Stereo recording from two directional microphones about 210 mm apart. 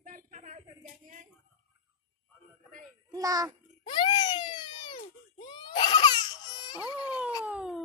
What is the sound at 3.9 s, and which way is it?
Baby cry, 20° left (ahead or behind).